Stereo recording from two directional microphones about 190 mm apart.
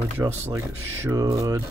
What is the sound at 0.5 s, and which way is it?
Speech, 15° right (ahead or behind).